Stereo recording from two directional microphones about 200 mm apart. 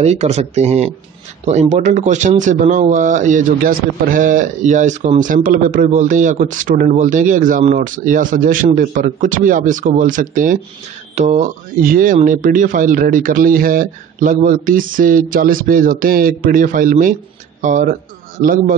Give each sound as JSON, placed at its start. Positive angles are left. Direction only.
{"t": 0.0, "sound": "speech", "side_deg": -35}